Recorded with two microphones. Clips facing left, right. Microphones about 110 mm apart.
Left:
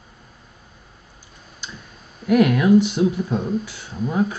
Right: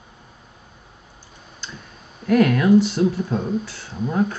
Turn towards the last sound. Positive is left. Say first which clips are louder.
# even
turn(degrees=0)  # may be behind; listen again after turning